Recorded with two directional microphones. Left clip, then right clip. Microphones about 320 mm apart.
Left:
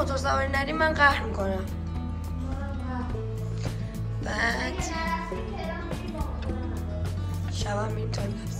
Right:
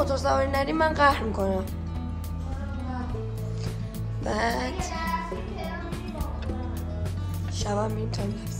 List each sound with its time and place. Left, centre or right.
0.0 s speech: centre
4.3 s speech: centre
7.6 s speech: centre